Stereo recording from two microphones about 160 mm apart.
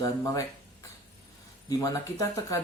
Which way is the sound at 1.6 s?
20° left (ahead or behind).